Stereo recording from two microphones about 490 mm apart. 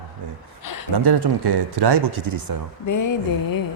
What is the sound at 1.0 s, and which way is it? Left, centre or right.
Speech, right.